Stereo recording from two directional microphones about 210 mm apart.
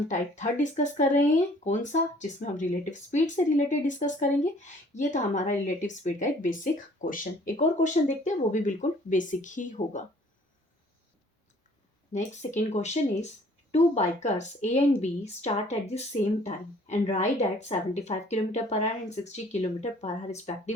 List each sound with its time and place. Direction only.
0.1 s speech: 35° left (ahead or behind)
12.1 s speech: 35° left (ahead or behind)